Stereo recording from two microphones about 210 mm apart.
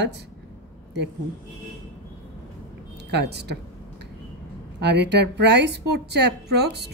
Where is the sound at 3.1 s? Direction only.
50° right (ahead or behind).